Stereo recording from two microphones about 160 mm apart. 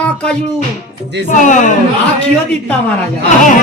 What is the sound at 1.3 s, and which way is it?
Speech, 50° left (ahead or behind).